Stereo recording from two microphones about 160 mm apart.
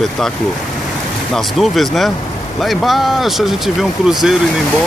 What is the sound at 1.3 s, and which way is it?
Speech, centre (ahead or behind).